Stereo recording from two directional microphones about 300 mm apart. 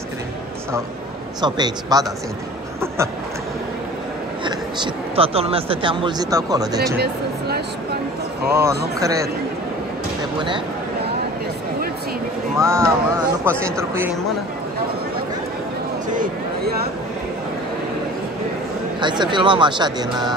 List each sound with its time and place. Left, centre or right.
1.4 s speech: centre
4.5 s speech: centre
7.0 s a sound: right
8.5 s speech: centre
12.5 s speech: centre
16.1 s a sound: right
18.9 s speech: centre